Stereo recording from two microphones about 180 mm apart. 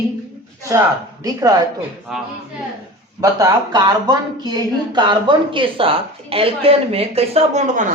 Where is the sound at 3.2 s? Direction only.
20° right (ahead or behind); by 7.9 s 45° right (ahead or behind).